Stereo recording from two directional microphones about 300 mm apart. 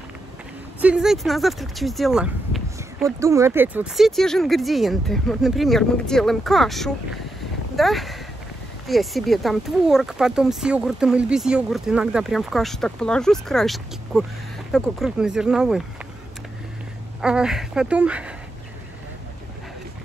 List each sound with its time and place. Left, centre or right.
0.7 s speech: centre
17.2 s speech: centre